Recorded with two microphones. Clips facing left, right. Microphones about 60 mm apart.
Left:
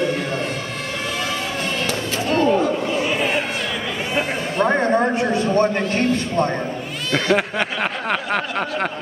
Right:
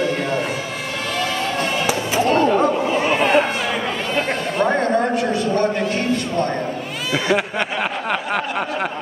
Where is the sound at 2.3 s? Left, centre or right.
Right.